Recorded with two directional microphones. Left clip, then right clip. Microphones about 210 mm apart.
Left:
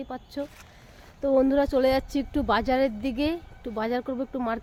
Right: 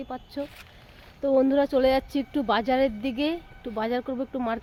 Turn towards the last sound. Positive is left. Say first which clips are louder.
# even
turn(degrees=-5)  # may be behind; listen again after turning